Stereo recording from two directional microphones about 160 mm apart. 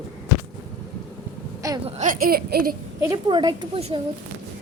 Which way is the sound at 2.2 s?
70° right (ahead or behind).